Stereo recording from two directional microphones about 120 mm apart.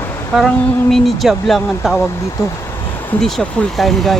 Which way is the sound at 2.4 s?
25° left (ahead or behind).